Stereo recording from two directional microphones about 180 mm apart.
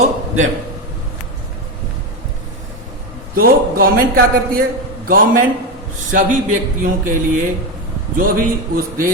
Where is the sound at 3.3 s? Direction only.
55° right (ahead or behind).